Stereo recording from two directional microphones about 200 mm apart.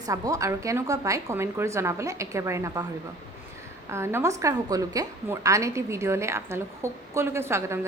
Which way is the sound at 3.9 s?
10° right (ahead or behind).